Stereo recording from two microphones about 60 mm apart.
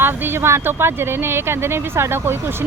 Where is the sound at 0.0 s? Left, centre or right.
Right.